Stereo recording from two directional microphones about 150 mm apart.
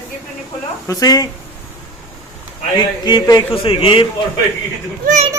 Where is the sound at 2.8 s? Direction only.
30° left (ahead or behind).